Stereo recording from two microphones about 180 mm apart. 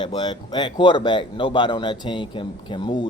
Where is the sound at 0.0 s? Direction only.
25° left (ahead or behind).